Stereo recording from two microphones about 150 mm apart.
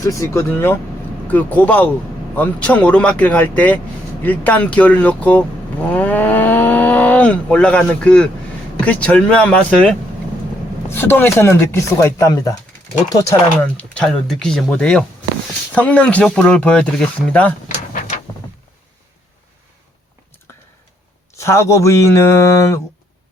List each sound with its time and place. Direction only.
0.0 s a man's voice: 20° left (ahead or behind)
13.6 s speech: 10° left (ahead or behind)
21.3 s a man's voice: 20° left (ahead or behind)